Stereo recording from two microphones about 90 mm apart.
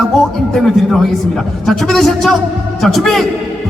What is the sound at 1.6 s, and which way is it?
A man's voice, 5° left (ahead or behind).